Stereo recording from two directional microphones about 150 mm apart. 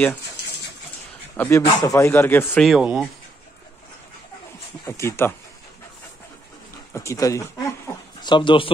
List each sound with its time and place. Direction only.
1.3 s speech: 15° left (ahead or behind)
2.6 s speech: 5° right (ahead or behind)
4.8 s speech: 20° left (ahead or behind)
6.9 s speech: 20° left (ahead or behind)
8.2 s speech: 30° left (ahead or behind)